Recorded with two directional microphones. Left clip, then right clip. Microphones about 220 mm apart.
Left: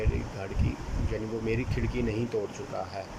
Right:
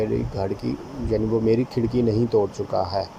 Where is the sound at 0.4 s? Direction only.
20° right (ahead or behind).